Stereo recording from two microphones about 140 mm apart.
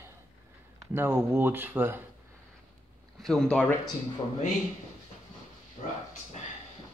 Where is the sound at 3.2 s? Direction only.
Centre (ahead or behind).